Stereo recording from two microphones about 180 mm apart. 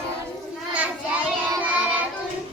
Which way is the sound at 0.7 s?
10° right (ahead or behind).